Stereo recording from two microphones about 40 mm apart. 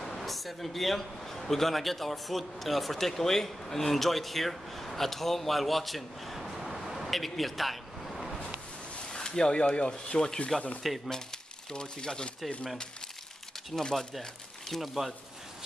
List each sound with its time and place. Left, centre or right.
0.0 s a man's voice: centre
9.1 s speech: centre
10.8 s speech: centre
11.7 s speech: centre
13.7 s speech: centre